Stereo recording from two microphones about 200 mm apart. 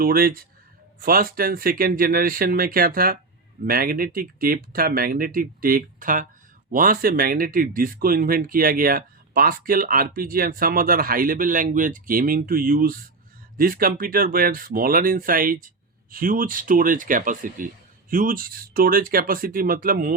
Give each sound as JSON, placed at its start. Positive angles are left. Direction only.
{"t": 0.0, "sound": "speech", "side_deg": -45}